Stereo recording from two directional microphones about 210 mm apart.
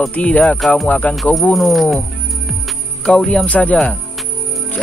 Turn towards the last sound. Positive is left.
turn(degrees=5)  # may be behind; listen again after turning